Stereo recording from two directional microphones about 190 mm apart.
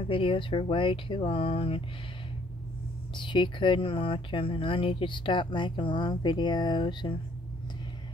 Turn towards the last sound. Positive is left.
turn(degrees=25)  # may be behind; listen again after turning